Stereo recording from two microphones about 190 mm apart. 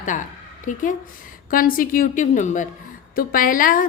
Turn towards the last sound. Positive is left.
turn(degrees=45)  # may be behind; listen again after turning